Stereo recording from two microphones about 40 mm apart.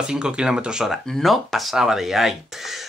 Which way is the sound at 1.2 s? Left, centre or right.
Centre.